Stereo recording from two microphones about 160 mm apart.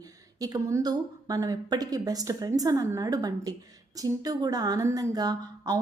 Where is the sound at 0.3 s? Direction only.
25° right (ahead or behind).